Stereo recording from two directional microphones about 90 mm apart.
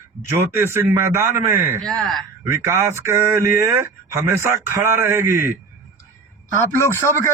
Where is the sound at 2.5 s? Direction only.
30° right (ahead or behind).